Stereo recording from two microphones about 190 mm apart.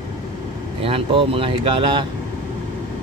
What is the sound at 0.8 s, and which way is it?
Speech, 30° right (ahead or behind).